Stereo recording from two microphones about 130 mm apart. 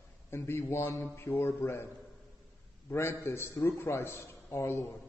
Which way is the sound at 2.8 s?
20° left (ahead or behind).